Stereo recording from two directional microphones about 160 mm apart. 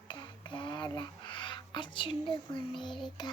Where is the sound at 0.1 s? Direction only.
30° left (ahead or behind).